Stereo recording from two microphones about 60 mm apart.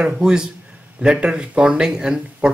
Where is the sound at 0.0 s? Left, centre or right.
Centre.